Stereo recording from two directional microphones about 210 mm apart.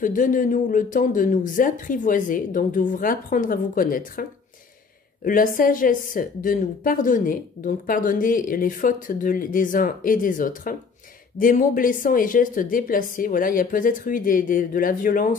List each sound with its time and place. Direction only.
0.0 s a woman's voice: 40° left (ahead or behind)